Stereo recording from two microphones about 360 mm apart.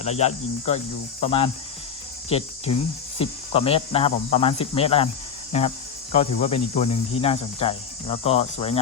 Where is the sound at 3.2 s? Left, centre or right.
Centre.